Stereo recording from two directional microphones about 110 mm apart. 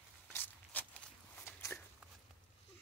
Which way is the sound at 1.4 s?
20° left (ahead or behind).